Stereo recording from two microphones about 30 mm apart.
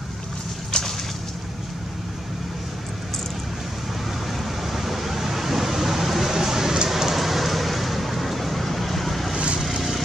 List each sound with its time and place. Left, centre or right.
0.7 s a sound: left
4.7 s vehicle: centre
6.9 s rain: centre
7.2 s vehicle: centre